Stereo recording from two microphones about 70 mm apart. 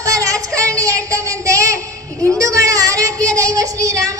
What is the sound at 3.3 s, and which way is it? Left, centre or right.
Child singing, right.